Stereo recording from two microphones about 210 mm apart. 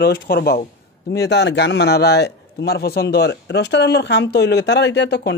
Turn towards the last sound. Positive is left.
turn(degrees=55)  # may be behind; listen again after turning